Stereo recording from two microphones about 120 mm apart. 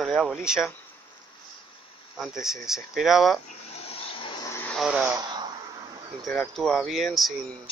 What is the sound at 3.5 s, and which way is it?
Vehicle, 55° left (ahead or behind).